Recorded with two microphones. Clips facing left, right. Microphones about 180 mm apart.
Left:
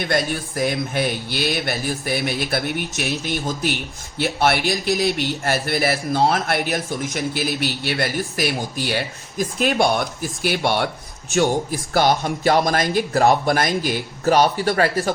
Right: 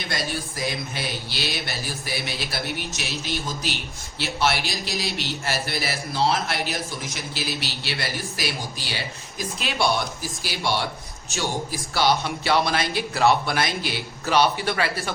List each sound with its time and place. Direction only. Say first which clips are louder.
0.0 s a man's voice: left 7 dB; 55° left (ahead or behind)